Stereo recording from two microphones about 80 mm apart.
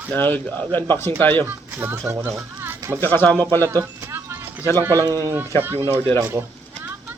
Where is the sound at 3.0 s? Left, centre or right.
Left.